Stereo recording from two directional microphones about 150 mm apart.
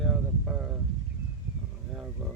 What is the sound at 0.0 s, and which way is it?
Vehicle, 5° right (ahead or behind).